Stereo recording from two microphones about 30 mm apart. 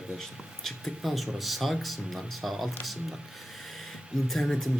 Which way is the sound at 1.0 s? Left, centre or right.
Centre.